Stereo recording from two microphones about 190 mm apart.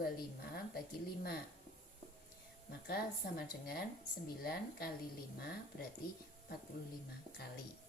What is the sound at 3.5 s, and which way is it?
Speech, 55° left (ahead or behind).